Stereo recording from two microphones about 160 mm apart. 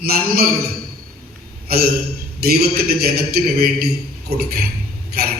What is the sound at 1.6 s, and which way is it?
Speech, 70° right (ahead or behind).